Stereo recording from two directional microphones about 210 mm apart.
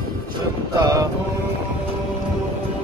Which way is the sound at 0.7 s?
15° right (ahead or behind).